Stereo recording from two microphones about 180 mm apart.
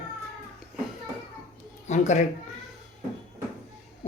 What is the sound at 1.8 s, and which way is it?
Speech, 40° left (ahead or behind).